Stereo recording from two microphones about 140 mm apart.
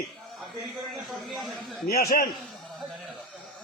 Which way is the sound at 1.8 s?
90° left.